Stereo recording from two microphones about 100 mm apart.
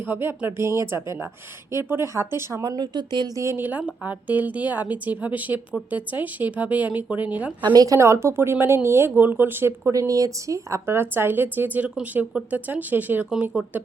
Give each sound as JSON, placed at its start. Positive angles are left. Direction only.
{"t": 0.0, "sound": "speech", "side_deg": -20}
{"t": 3.3, "sound": "a woman's voice", "side_deg": -25}
{"t": 7.6, "sound": "a woman's voice", "side_deg": -50}
{"t": 7.9, "sound": "a woman's voice", "side_deg": -30}
{"t": 13.3, "sound": "a woman's voice", "side_deg": -5}